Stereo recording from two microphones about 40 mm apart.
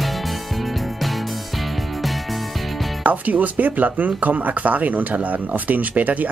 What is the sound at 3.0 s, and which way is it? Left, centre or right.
Speech, right.